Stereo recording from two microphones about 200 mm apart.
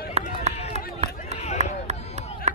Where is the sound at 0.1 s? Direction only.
35° right (ahead or behind).